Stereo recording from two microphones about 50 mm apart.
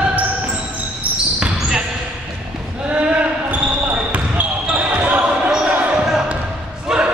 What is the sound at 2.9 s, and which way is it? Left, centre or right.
Basketball bounce, right.